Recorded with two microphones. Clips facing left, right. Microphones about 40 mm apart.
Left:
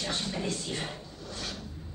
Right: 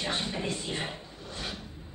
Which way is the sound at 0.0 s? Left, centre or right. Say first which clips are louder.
Right 1 dB; right.